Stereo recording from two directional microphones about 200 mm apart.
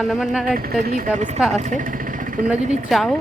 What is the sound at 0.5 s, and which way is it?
Speech, 50° right (ahead or behind).